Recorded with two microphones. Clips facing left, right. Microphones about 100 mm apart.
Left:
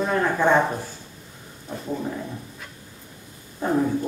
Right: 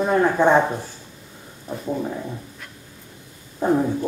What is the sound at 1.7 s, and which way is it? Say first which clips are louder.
Speech: right 3 dB; 15° right (ahead or behind).